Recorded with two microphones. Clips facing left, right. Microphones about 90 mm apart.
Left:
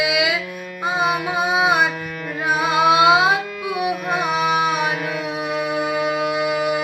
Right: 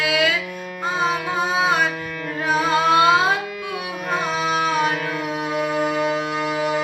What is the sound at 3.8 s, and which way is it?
Carnatic music, 15° left (ahead or behind).